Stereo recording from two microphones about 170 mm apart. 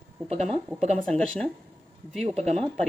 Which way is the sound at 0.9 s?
5° left (ahead or behind).